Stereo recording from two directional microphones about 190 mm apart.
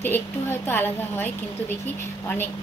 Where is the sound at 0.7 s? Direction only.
10° left (ahead or behind).